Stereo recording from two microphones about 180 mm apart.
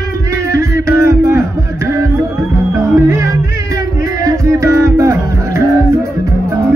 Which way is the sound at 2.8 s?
15° right (ahead or behind).